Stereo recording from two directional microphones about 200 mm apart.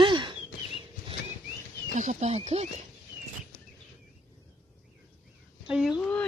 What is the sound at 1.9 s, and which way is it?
Speech, 35° right (ahead or behind).